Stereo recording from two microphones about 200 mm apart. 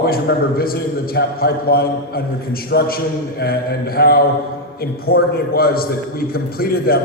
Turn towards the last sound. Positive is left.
turn(degrees=50)  # may be behind; listen again after turning